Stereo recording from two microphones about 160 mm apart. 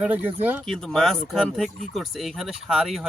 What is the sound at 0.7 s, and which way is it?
Speech, 5° left (ahead or behind).